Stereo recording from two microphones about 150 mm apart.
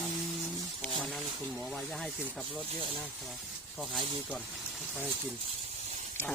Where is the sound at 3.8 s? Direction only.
Centre (ahead or behind).